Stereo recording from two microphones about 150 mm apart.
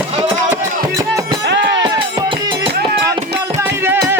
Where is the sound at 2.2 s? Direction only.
30° right (ahead or behind).